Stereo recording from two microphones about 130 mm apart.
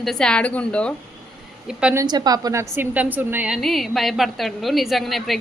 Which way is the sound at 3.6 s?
Centre (ahead or behind).